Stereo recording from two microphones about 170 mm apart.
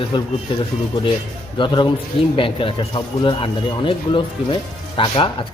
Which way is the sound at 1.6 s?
25° left (ahead or behind).